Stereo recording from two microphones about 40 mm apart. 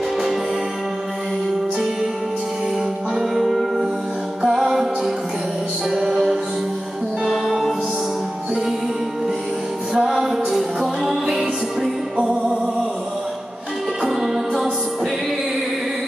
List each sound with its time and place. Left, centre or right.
3.2 s music: centre
7.2 s music: centre
10.0 s music: centre
12.2 s music: right
14.0 s music: centre